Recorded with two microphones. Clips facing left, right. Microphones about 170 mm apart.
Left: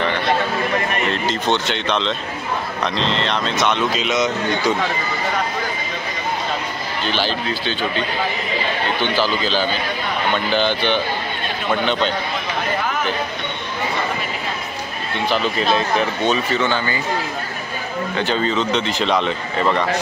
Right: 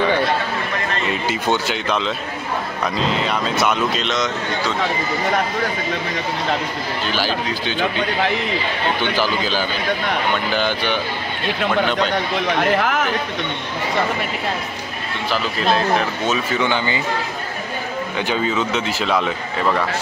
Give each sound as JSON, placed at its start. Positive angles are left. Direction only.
{"t": 1.1, "sound": "speech", "side_deg": -10}
{"t": 7.1, "sound": "speech", "side_deg": -10}
{"t": 9.1, "sound": "speech", "side_deg": -10}
{"t": 12.5, "sound": "speech", "side_deg": -70}
{"t": 15.2, "sound": "speech", "side_deg": 0}
{"t": 16.3, "sound": "speech", "side_deg": -15}
{"t": 18.1, "sound": "speech", "side_deg": -10}